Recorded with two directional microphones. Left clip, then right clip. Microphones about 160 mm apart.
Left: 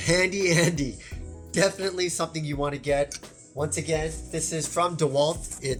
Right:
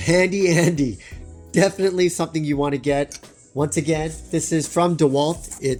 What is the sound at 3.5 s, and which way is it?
Speech, 70° right (ahead or behind).